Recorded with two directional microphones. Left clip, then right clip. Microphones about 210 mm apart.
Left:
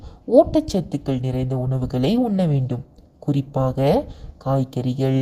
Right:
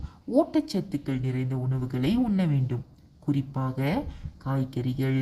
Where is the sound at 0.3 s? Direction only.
30° left (ahead or behind).